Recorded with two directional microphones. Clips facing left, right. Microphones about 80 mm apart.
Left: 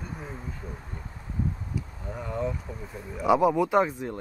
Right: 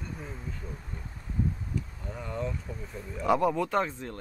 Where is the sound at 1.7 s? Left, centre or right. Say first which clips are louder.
Left 1 dB; centre.